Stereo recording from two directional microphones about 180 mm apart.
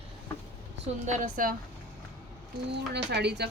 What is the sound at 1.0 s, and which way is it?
Speech, 45° right (ahead or behind).